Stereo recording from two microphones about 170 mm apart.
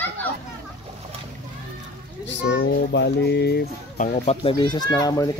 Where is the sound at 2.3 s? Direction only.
90° left; by 3.7 s 75° left (ahead or behind).